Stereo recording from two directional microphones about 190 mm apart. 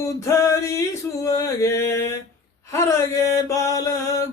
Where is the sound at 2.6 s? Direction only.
15° left (ahead or behind).